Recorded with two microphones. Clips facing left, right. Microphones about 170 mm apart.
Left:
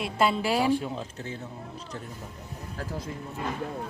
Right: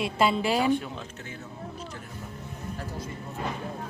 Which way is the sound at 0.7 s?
30° left (ahead or behind).